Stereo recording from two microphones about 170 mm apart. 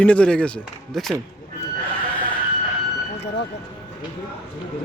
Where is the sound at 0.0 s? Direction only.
5° left (ahead or behind).